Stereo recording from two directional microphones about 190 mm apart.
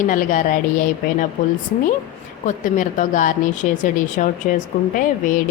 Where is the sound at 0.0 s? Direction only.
45° left (ahead or behind).